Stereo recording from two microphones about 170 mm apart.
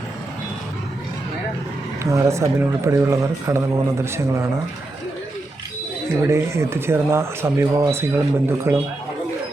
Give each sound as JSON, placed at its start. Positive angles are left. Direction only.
{"t": 2.0, "sound": "speech", "side_deg": -15}
{"t": 6.2, "sound": "speech", "side_deg": -15}